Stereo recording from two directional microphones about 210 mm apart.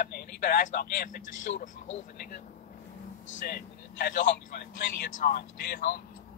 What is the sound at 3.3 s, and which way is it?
Speech, 45° left (ahead or behind).